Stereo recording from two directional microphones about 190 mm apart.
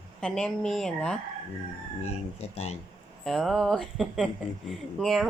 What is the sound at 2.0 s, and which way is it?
Speech, 35° left (ahead or behind).